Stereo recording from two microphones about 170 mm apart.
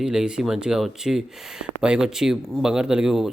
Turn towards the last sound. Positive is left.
turn(degrees=-5)  # may be behind; listen again after turning